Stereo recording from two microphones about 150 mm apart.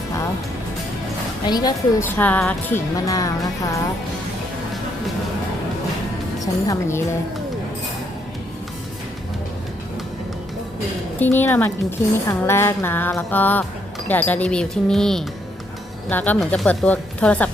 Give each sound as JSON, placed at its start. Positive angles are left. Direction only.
{"t": 1.5, "sound": "music", "side_deg": 25}
{"t": 2.0, "sound": "a woman's voice", "side_deg": 10}
{"t": 3.1, "sound": "music", "side_deg": 25}
{"t": 6.7, "sound": "music", "side_deg": 20}
{"t": 11.2, "sound": "a woman's voice", "side_deg": 15}